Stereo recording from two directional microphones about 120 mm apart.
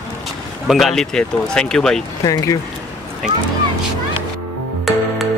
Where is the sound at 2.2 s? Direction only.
30° left (ahead or behind).